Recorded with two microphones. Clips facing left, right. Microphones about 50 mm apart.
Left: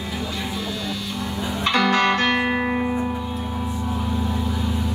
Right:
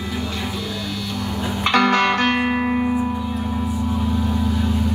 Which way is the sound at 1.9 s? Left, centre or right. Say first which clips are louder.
Right 1 dB; right.